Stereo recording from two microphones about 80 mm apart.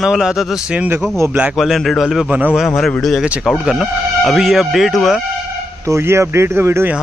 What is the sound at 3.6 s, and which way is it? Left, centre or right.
Speech, centre.